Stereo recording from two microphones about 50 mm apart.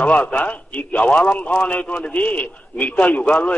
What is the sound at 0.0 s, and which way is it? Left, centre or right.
A man's voice, left.